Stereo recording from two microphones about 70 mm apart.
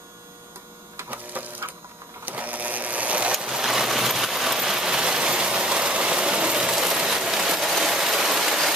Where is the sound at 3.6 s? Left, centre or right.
Centre.